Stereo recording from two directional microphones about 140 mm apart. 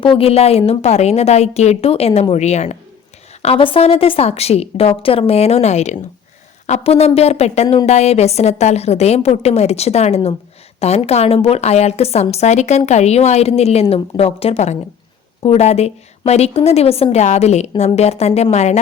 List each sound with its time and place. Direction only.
0.0 s a woman's voice: 40° left (ahead or behind)
3.4 s a woman's voice: 40° left (ahead or behind)